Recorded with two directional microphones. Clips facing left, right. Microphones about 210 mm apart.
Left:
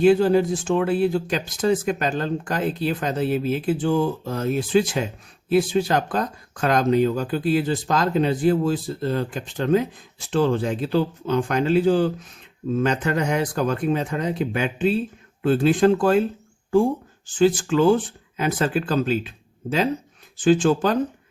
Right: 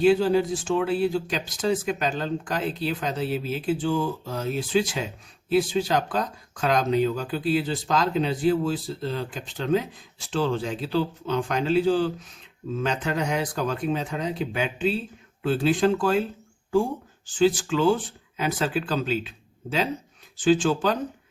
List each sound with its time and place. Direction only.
0.0 s speech: 50° left (ahead or behind)
17.3 s speech: 50° left (ahead or behind)
20.4 s speech: 50° left (ahead or behind)